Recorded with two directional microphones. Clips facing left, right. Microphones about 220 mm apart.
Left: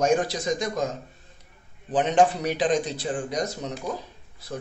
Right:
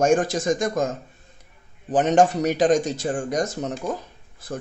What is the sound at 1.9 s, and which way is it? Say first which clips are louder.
Speech: right 3 dB; 45° right (ahead or behind).